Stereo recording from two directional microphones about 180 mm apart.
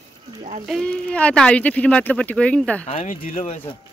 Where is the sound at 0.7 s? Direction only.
5° left (ahead or behind).